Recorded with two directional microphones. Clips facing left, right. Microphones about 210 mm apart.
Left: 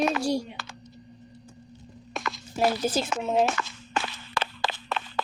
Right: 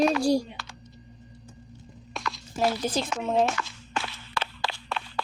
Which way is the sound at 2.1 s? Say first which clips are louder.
Left 1 dB; centre (ahead or behind).